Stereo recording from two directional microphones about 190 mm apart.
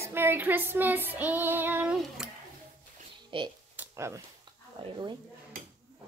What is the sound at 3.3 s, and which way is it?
Speech, 25° right (ahead or behind).